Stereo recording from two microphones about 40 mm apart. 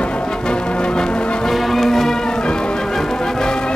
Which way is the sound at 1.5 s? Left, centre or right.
Centre.